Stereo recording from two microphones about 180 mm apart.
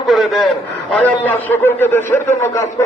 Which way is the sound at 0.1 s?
Centre (ahead or behind).